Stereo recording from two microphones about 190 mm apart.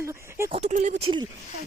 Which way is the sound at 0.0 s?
15° right (ahead or behind).